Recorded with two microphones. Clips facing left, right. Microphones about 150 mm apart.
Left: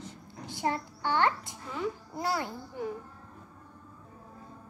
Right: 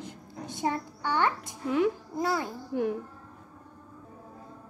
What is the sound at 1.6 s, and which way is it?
Speech, 75° right (ahead or behind).